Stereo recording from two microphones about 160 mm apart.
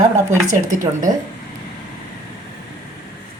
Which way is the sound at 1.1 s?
25° right (ahead or behind).